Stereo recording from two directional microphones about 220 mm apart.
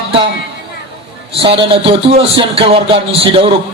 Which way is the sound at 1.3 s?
25° right (ahead or behind).